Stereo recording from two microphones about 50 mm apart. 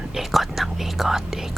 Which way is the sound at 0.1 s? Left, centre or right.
Centre.